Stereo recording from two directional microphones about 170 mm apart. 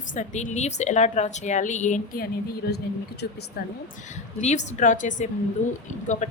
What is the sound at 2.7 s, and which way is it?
Speech, 75° left (ahead or behind).